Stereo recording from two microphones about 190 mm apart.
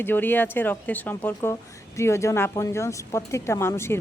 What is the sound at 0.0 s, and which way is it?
Speech, 10° left (ahead or behind).